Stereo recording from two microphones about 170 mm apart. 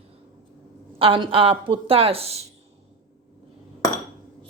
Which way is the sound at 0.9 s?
30° right (ahead or behind).